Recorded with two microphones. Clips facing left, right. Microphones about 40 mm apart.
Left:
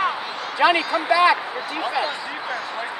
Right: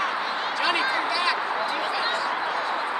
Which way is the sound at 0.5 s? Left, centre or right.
Left.